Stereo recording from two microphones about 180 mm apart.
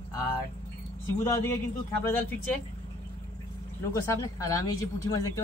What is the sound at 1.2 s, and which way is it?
A man's voice, 15° left (ahead or behind).